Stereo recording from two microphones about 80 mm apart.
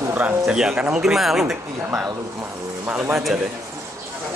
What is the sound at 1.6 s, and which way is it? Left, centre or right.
Speech, right.